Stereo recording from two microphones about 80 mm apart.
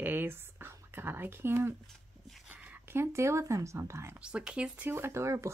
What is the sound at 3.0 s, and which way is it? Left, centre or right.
Speech, right.